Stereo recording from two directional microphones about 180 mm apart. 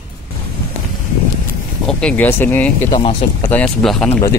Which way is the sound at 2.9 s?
25° left (ahead or behind).